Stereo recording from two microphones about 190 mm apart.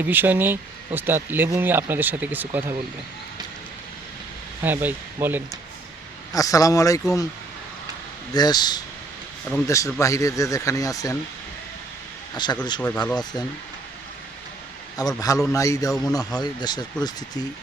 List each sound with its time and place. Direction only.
0.0 s speech: 10° right (ahead or behind)
4.6 s speech: 10° right (ahead or behind)
6.3 s speech: 20° left (ahead or behind)
8.3 s speech: 20° left (ahead or behind)
12.3 s speech: 20° left (ahead or behind)
12.8 s speech: 5° left (ahead or behind)
14.9 s speech: 20° left (ahead or behind)